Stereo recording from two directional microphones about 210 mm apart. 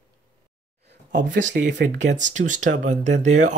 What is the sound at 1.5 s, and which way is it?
Speech, 55° right (ahead or behind).